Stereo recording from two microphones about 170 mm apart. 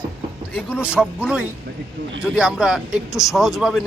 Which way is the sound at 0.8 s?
5° right (ahead or behind).